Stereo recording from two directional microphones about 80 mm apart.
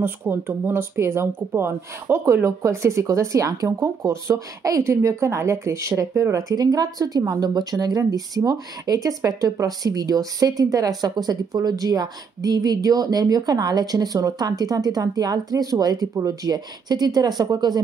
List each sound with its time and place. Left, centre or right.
0.0 s speech: right
6.3 s speech: right